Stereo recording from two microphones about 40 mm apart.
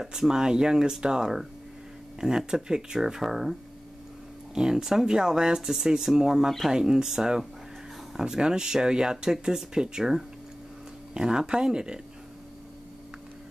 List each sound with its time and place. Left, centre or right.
0.0 s speech: centre
4.6 s speech: centre